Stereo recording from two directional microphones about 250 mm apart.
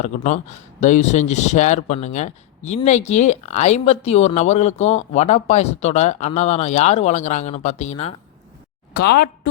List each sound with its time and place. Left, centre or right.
0.0 s speech: left
8.9 s a woman's voice: left